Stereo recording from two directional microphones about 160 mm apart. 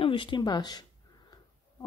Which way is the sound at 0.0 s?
30° left (ahead or behind).